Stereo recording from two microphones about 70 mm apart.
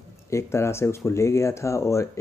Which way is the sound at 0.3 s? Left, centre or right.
Left.